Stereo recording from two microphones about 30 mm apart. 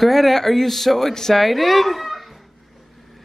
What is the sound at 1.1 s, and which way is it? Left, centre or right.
Speech, centre.